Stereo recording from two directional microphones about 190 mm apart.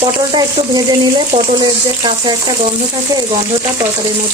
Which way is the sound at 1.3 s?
25° right (ahead or behind).